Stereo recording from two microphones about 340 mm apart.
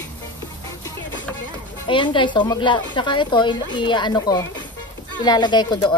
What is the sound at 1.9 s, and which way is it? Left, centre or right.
A woman's voice, centre.